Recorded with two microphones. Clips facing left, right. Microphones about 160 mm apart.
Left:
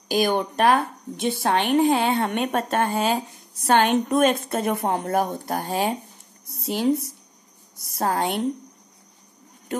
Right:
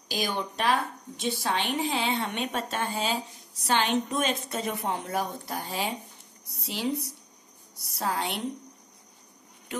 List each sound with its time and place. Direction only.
0.1 s a woman's voice: 55° left (ahead or behind)
9.7 s speech: 45° left (ahead or behind)